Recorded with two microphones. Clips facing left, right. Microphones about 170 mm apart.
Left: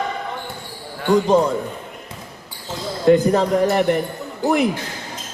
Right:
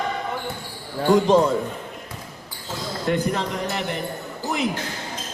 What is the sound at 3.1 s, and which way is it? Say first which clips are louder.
Speech: left 10 dB; 45° left (ahead or behind).